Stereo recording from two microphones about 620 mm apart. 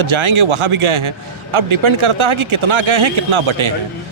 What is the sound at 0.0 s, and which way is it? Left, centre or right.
A man's voice, right.